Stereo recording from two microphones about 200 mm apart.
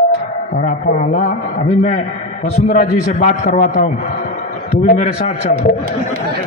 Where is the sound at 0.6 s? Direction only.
45° left (ahead or behind).